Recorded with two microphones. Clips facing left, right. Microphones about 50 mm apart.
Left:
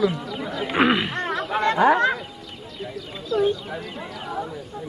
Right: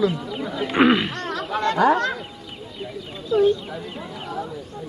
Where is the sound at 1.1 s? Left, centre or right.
Centre.